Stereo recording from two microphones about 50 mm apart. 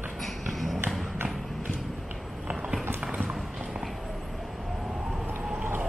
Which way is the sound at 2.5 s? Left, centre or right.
Centre.